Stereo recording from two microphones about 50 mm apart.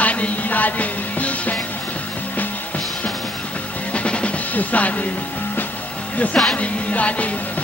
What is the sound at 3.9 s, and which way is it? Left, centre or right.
Music, left.